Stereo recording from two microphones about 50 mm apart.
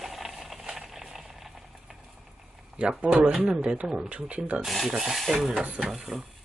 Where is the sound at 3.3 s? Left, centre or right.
Centre.